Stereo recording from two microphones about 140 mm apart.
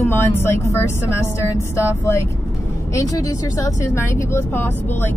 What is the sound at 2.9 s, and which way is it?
Speech, 25° left (ahead or behind).